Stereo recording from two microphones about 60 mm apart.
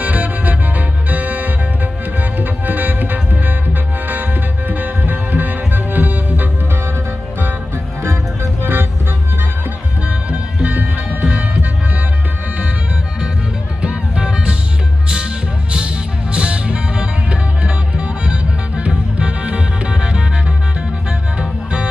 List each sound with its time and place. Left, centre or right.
0.0 s music: right
8.6 s music: right
10.1 s music: right
13.8 s music: centre
16.3 s music: centre